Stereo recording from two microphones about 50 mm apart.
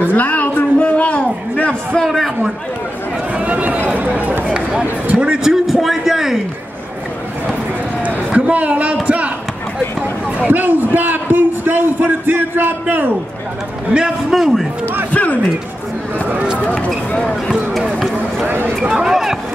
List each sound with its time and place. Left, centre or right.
0.1 s a sound: left
0.7 s a man's voice: left
2.0 s a man's voice: centre
3.3 s speech: right
4.6 s a man's voice: centre
8.4 s a man's voice: right
10.5 s a man's voice: right
13.9 s a man's voice: right
14.3 s a man's voice: centre
15.1 s speech: left
16.8 s speech: left
17.9 s run: centre
18.9 s a man's voice: centre